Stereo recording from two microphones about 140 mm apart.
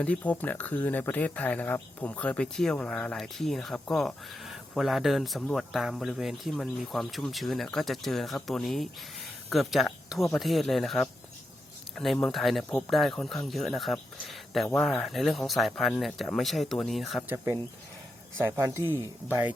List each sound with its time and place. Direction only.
0.0 s speech: 10° left (ahead or behind)
17.2 s speech: 20° right (ahead or behind)